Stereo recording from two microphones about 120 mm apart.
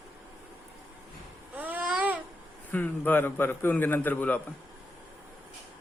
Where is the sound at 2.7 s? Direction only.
15° left (ahead or behind).